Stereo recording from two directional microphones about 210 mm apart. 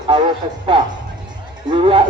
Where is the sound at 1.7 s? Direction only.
25° right (ahead or behind).